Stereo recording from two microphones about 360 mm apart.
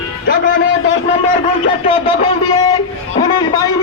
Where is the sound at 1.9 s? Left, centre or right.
Centre.